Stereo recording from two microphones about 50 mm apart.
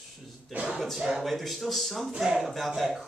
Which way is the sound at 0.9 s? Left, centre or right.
Centre.